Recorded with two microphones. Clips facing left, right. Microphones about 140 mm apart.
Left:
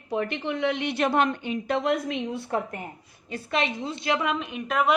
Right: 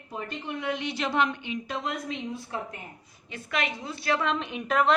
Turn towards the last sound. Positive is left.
turn(degrees=0)  # may be behind; listen again after turning